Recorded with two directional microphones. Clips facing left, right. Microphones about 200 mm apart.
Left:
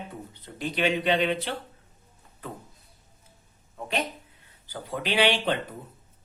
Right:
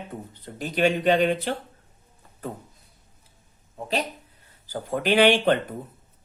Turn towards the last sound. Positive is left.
turn(degrees=-50)  # may be behind; listen again after turning